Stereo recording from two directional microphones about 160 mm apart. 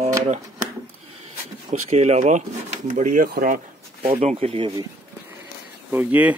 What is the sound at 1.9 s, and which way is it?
Speech, 45° right (ahead or behind).